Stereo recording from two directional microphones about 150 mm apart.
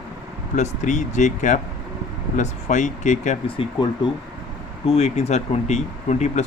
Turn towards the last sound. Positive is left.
turn(degrees=50)  # may be behind; listen again after turning